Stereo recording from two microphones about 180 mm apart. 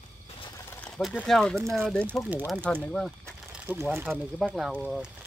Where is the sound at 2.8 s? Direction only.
5° left (ahead or behind).